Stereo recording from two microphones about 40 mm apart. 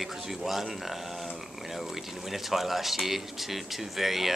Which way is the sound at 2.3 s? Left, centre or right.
Centre.